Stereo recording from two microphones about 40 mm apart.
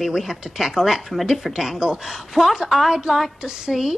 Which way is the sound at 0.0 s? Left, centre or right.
Centre.